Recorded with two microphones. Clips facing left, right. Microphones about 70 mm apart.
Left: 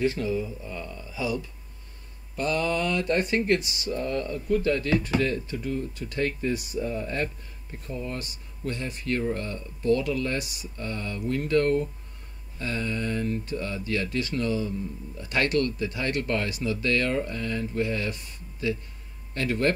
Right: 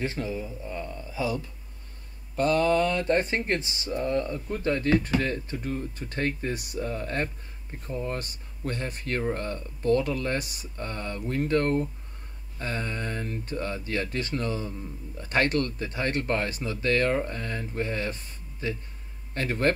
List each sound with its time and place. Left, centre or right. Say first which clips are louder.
0.0 s speech: left 5 dB; right
6.5 s speech: left 2 dB; right